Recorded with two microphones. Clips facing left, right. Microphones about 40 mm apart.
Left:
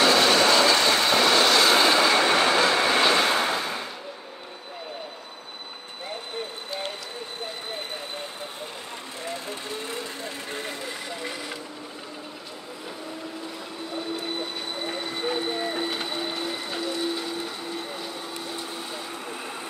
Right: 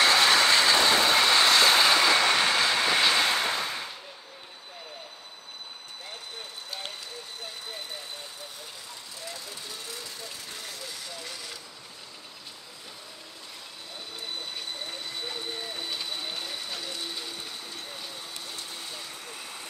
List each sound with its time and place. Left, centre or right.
0.0 s train: centre
0.4 s train: centre
0.7 s vehicle: centre
9.2 s vehicle: left
15.2 s vehicle: left
15.8 s a sound: left
16.3 s a sound: left